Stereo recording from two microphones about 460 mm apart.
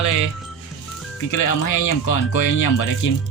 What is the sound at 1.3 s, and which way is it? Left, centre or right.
Speech, left.